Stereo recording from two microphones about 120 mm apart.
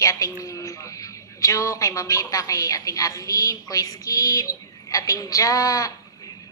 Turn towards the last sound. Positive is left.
turn(degrees=30)  # may be behind; listen again after turning